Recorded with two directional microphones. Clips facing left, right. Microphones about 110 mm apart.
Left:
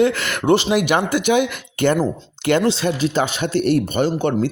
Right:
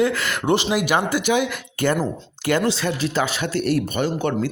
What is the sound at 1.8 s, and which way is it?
Speech, 25° left (ahead or behind).